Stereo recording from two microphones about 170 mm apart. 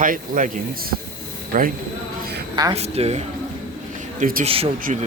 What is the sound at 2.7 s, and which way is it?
Speech, 40° right (ahead or behind).